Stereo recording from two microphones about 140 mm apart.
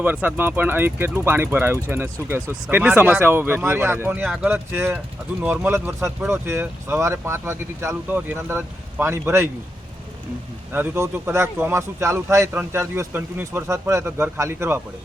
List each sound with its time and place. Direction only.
0.0 s speech: 10° right (ahead or behind)
10.7 s a man's voice: 15° right (ahead or behind)